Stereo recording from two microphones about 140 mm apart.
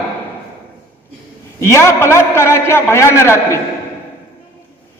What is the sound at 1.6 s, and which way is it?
A man's voice, 20° left (ahead or behind).